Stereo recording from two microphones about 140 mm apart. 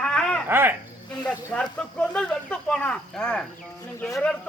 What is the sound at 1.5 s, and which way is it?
Speech, 10° left (ahead or behind).